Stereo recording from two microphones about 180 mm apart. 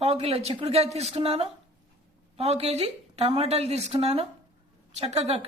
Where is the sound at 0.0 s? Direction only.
35° right (ahead or behind).